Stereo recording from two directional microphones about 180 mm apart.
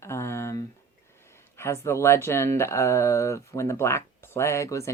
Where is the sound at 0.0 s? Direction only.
15° left (ahead or behind).